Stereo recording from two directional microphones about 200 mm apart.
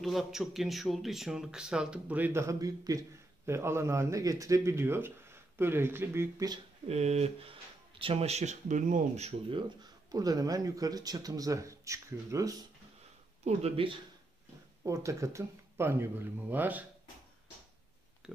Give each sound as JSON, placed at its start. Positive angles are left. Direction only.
{"t": 0.0, "sound": "speech", "side_deg": 0}
{"t": 6.9, "sound": "speech", "side_deg": -35}
{"t": 10.1, "sound": "speech", "side_deg": -20}
{"t": 13.4, "sound": "speech", "side_deg": -30}
{"t": 14.8, "sound": "speech", "side_deg": -15}